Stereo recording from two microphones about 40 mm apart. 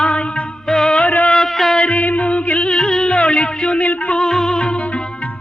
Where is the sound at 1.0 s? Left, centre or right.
Left.